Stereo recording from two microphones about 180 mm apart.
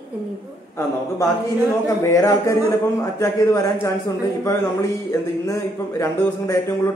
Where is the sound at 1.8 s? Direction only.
20° left (ahead or behind).